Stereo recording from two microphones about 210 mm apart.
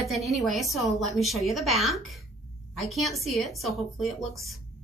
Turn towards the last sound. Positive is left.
turn(degrees=0)  # may be behind; listen again after turning